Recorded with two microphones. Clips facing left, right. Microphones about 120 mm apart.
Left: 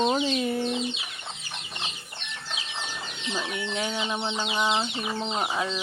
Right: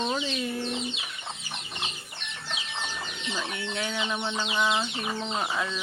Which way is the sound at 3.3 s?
20° left (ahead or behind).